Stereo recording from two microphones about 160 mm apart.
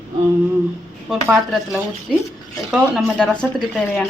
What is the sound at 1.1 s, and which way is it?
A woman's voice, centre (ahead or behind).